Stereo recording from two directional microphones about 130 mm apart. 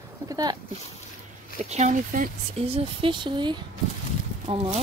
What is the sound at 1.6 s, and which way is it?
Speech, 60° right (ahead or behind).